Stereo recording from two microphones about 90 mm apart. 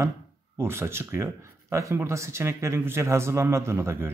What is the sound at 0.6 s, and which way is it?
A man's voice, 25° right (ahead or behind).